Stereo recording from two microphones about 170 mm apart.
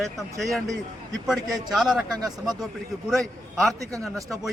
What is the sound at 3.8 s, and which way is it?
Speech, 20° right (ahead or behind).